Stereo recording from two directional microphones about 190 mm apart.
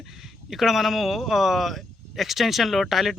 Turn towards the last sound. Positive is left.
turn(degrees=0)  # may be behind; listen again after turning